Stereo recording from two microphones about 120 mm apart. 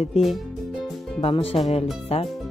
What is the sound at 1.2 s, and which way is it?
Speech, 55° left (ahead or behind).